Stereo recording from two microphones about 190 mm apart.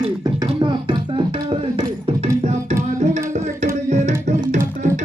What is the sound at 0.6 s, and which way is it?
Music, 25° right (ahead or behind).